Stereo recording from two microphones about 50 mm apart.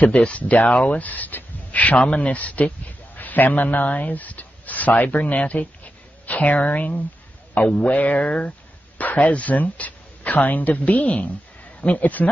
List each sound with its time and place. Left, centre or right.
0.0 s speech: left